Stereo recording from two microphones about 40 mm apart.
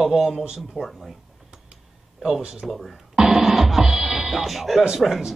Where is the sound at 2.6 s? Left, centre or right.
Centre.